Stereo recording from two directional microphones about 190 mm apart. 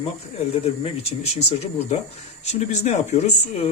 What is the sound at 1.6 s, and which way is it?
Speech, 35° left (ahead or behind).